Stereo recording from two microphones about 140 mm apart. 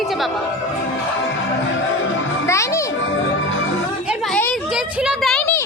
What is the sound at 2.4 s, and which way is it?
Speech, 20° left (ahead or behind).